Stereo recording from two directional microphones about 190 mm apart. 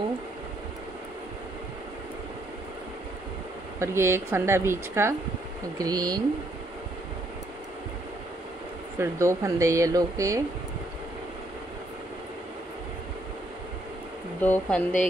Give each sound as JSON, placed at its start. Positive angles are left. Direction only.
{"t": 3.8, "sound": "speech", "side_deg": -15}
{"t": 8.9, "sound": "speech", "side_deg": -15}
{"t": 14.4, "sound": "speech", "side_deg": 10}